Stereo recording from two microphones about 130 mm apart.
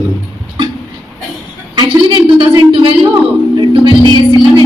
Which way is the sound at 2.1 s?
40° right (ahead or behind).